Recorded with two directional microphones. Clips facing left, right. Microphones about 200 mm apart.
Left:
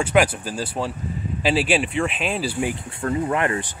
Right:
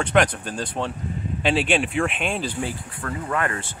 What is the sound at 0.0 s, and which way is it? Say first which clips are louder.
Speech: left 1 dB; 5° left (ahead or behind).